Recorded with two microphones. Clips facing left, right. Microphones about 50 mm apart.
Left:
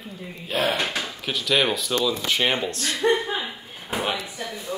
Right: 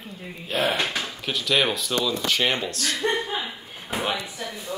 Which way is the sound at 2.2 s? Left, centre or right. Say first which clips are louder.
Left 1 dB; centre.